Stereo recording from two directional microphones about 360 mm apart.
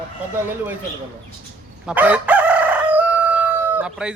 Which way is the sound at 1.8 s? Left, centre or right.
Centre.